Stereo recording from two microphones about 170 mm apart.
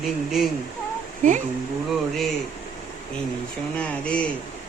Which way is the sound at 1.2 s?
45° right (ahead or behind).